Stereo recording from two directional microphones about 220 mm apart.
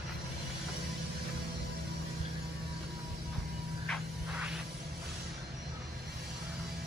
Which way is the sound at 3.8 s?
5° left (ahead or behind).